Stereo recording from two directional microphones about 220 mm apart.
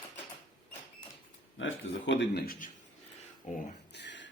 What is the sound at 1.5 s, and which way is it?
A man's voice, 60° left (ahead or behind).